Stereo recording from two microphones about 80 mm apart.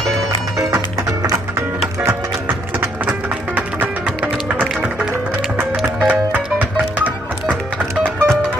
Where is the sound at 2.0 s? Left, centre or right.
Right.